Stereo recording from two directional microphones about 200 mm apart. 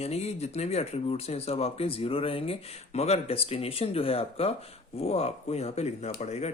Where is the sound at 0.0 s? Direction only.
30° left (ahead or behind).